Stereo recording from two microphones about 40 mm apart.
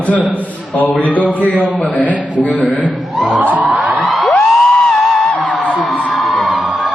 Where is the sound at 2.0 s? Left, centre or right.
Left.